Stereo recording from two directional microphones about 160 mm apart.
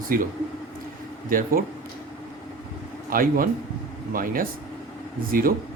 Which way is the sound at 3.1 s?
60° right (ahead or behind).